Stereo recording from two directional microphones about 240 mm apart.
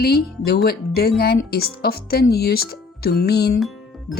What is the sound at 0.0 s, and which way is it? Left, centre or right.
Speech, left.